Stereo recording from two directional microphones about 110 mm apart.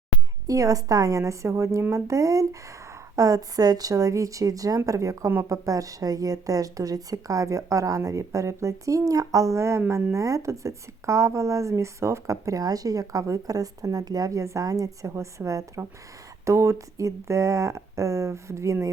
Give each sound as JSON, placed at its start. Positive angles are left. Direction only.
{"t": 0.4, "sound": "speech", "side_deg": -30}